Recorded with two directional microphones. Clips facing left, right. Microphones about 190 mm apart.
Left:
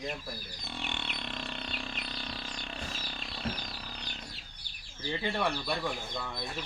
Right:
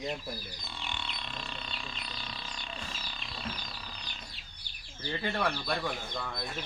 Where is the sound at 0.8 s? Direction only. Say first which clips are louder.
Left 1 dB; 65° left (ahead or behind).